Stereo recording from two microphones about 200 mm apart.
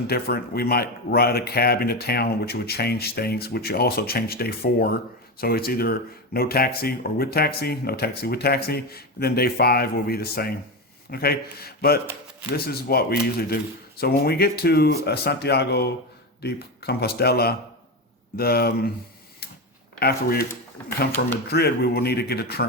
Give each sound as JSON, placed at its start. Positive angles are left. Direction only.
{"t": 0.1, "sound": "speech", "side_deg": 50}
{"t": 20.0, "sound": "speech", "side_deg": 50}